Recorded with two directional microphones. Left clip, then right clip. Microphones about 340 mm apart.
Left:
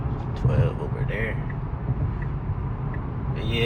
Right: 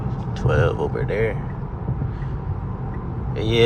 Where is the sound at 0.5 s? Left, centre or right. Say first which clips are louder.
Right 10 dB; right.